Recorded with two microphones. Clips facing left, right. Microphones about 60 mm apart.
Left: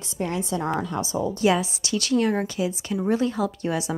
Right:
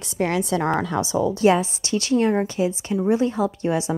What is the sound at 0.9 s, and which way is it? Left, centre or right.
Speech, right.